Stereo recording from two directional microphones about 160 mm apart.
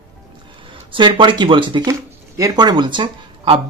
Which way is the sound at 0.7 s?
30° right (ahead or behind).